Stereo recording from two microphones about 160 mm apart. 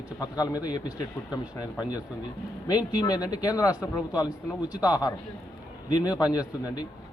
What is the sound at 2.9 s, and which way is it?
Speech, 25° left (ahead or behind).